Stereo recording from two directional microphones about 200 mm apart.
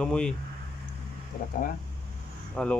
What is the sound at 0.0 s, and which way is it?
Speech, 5° left (ahead or behind).